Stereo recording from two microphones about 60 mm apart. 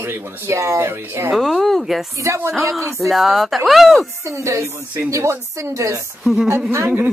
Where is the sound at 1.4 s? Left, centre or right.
Centre.